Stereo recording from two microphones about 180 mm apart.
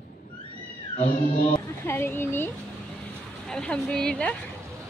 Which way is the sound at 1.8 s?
15° left (ahead or behind).